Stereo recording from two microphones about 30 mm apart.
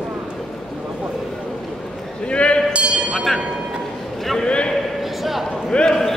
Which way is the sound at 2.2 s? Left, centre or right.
Left.